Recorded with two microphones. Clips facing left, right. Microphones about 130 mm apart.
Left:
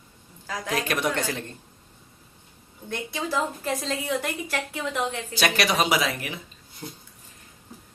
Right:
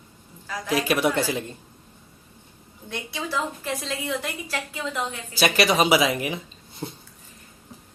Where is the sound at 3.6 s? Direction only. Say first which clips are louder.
Left 1 dB; 45° left (ahead or behind).